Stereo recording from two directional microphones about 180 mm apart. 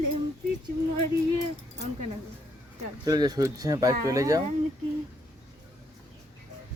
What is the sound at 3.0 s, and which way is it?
Speech, 20° right (ahead or behind).